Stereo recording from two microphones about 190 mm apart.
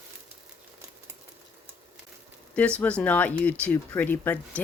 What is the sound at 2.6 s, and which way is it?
Speech, 5° left (ahead or behind).